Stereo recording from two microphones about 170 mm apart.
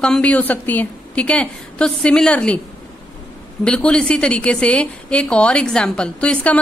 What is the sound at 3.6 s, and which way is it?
A woman's voice, 5° left (ahead or behind).